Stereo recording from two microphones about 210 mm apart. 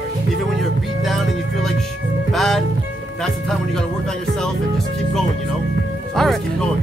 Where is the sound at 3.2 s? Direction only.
Centre (ahead or behind).